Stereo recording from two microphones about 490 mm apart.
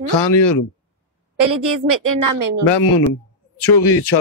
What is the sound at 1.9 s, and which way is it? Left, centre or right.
Speech, right.